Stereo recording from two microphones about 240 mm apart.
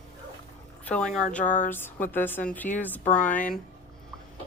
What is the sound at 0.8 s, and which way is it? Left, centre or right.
Speech, centre.